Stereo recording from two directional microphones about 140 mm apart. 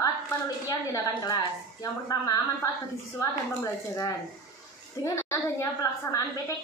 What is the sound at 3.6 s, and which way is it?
A woman's voice, 25° left (ahead or behind).